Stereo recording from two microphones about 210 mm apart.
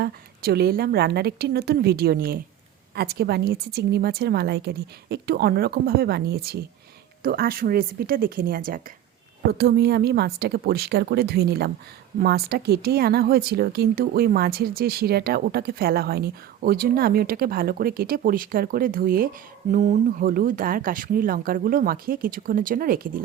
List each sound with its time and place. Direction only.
0.0 s speech: 50° right (ahead or behind)